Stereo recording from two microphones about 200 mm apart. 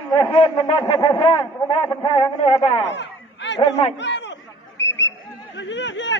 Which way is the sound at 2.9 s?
60° left (ahead or behind).